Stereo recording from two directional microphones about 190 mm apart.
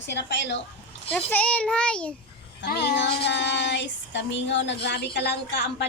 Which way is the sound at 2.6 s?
60° left (ahead or behind).